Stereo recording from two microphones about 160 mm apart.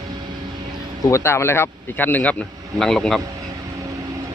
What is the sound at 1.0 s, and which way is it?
Speech, 15° left (ahead or behind).